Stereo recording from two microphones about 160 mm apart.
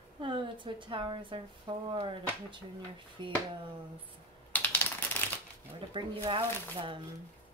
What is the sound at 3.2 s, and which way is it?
Speech, 30° right (ahead or behind).